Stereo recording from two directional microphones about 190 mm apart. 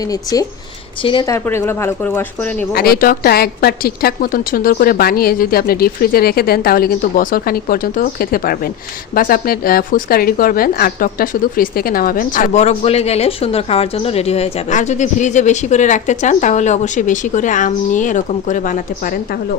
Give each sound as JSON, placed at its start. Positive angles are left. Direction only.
{"t": 0.0, "sound": "speech", "side_deg": 20}
{"t": 2.7, "sound": "a woman's voice", "side_deg": 55}